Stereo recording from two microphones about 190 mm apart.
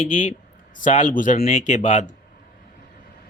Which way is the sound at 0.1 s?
40° left (ahead or behind).